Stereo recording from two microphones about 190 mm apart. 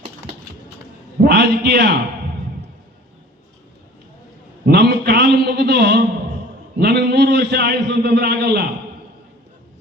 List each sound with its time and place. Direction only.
1.2 s a man's voice: 60° right (ahead or behind)
4.6 s a man's voice: 60° right (ahead or behind)